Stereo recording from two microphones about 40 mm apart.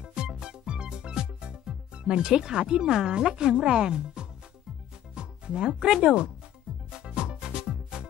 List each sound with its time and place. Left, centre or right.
0.0 s music: right
3.1 s speech: right
5.1 s music: right
6.0 s speech: right
6.9 s music: centre